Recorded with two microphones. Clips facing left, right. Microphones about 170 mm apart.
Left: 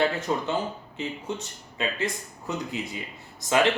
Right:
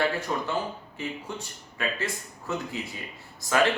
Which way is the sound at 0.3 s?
20° left (ahead or behind).